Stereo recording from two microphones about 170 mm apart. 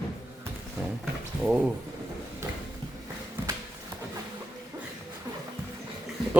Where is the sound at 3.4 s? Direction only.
10° right (ahead or behind).